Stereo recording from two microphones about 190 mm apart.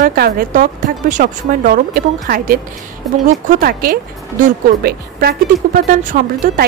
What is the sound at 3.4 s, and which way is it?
Speech, 50° right (ahead or behind).